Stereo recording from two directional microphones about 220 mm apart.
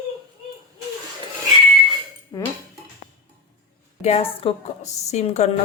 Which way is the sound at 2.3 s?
15° left (ahead or behind).